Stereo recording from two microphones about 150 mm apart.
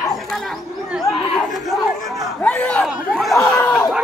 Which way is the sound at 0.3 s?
Centre (ahead or behind).